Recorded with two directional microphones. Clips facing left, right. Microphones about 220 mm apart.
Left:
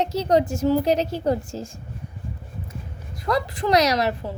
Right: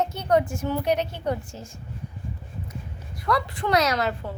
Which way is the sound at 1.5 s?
35° left (ahead or behind).